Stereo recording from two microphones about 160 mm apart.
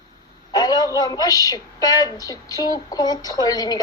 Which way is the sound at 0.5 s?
25° left (ahead or behind).